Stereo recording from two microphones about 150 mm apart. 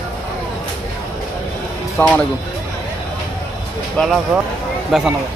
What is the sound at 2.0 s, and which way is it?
Speech, 10° left (ahead or behind).